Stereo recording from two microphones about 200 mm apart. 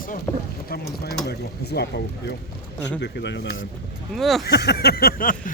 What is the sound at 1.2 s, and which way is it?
Speech, 55° left (ahead or behind).